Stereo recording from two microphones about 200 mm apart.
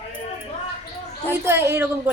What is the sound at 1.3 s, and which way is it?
Speech, 10° right (ahead or behind).